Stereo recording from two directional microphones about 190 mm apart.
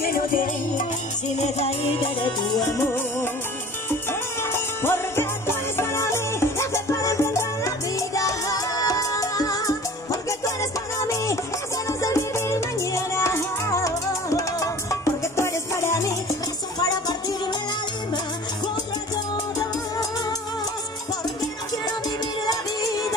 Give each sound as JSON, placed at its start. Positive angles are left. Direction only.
{"t": 0.0, "sound": "music", "side_deg": 45}
{"t": 1.4, "sound": "music", "side_deg": 30}
{"t": 2.6, "sound": "music", "side_deg": 10}
{"t": 4.4, "sound": "music", "side_deg": 10}